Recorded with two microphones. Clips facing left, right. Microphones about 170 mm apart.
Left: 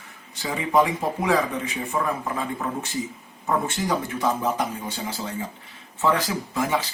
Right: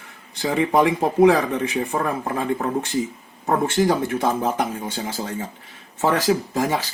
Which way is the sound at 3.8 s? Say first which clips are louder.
Right 4 dB; 50° right (ahead or behind).